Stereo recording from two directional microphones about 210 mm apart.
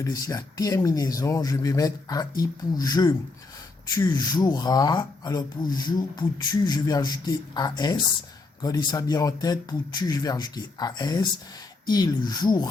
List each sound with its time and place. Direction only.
0.0 s speech: 15° left (ahead or behind)